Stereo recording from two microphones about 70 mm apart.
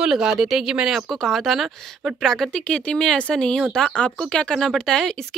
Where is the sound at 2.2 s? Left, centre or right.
Centre.